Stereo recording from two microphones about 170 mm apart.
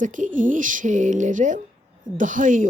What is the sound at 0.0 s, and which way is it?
Speech, 50° right (ahead or behind).